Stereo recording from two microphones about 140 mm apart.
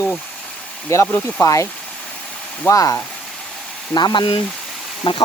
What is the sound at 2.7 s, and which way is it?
Speech, 25° left (ahead or behind).